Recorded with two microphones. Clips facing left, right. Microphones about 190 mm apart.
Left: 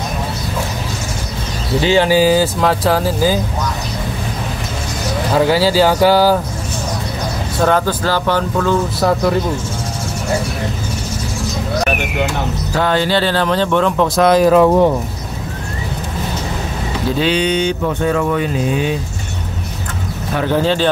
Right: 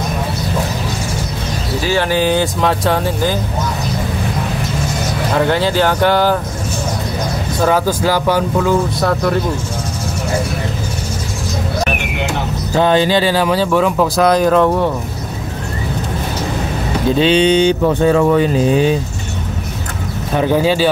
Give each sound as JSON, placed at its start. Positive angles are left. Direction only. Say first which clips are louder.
{"t": 1.8, "sound": "speech", "louder": "left 4 dB", "side_deg": 20}
{"t": 2.0, "sound": "speech", "louder": "left 3 dB", "side_deg": 5}
{"t": 5.3, "sound": "speech", "louder": "left 2 dB", "side_deg": 5}
{"t": 7.6, "sound": "speech", "louder": "right 1 dB", "side_deg": -10}
{"t": 9.0, "sound": "speech", "louder": "left 1 dB", "side_deg": 5}
{"t": 12.7, "sound": "speech", "louder": "right 3 dB", "side_deg": -20}
{"t": 17.2, "sound": "speech", "louder": "right 5 dB", "side_deg": -25}
{"t": 20.3, "sound": "speech", "louder": "right 2 dB", "side_deg": -10}